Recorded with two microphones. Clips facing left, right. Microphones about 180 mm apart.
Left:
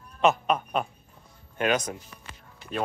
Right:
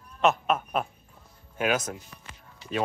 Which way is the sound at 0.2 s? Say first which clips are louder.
Left 1 dB; centre (ahead or behind).